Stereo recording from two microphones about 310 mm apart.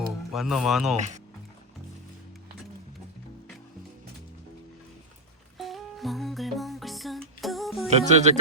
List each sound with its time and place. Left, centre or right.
0.3 s speech: centre
0.9 s speech: right
5.5 s music: centre
7.9 s speech: right